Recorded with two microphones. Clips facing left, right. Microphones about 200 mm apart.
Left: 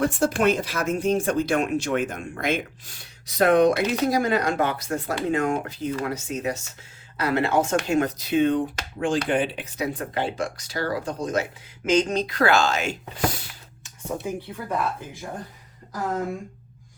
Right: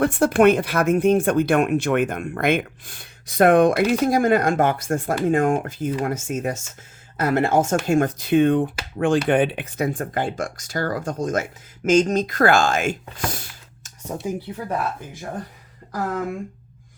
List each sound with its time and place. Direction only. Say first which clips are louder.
0.0 s speech: right 5 dB; 60° right (ahead or behind)